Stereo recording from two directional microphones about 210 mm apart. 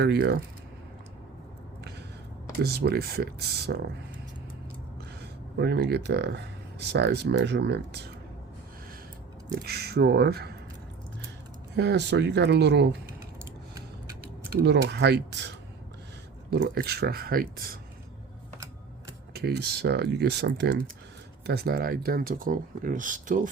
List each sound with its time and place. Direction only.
0.0 s speech: 50° right (ahead or behind)
2.6 s speech: 50° right (ahead or behind)
5.2 s speech: 50° right (ahead or behind)
9.5 s speech: 50° right (ahead or behind)
11.8 s speech: 55° right (ahead or behind)
14.6 s speech: 55° right (ahead or behind)
19.3 s speech: 50° right (ahead or behind)